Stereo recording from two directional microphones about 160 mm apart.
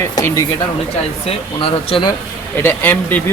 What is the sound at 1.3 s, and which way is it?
Speech, 35° left (ahead or behind).